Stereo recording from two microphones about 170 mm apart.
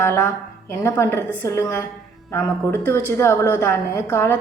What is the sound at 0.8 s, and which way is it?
A woman's voice, 15° left (ahead or behind).